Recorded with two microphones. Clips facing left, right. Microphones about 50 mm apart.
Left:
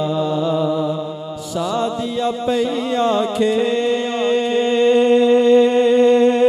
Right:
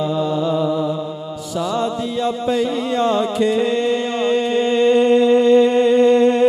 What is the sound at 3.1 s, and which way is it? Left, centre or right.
Music, left.